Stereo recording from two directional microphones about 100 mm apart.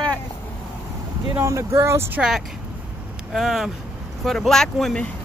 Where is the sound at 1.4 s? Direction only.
30° right (ahead or behind).